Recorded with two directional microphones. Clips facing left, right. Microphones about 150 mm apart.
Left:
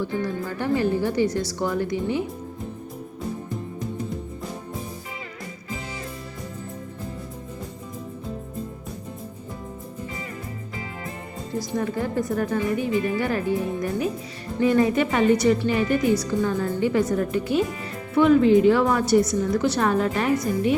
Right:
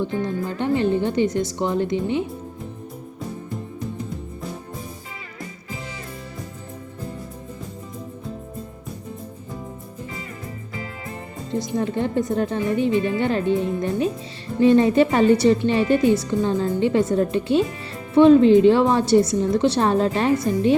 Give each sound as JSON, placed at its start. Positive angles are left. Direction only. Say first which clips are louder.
{"t": 0.0, "sound": "speech", "louder": "right 2 dB", "side_deg": -20}
{"t": 11.6, "sound": "speech", "louder": "right 2 dB", "side_deg": -25}